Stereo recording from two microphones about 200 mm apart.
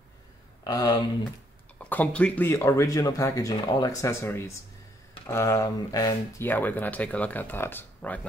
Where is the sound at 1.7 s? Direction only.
10° left (ahead or behind).